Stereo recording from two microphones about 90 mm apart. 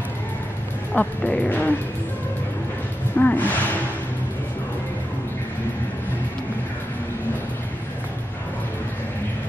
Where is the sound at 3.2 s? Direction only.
20° left (ahead or behind).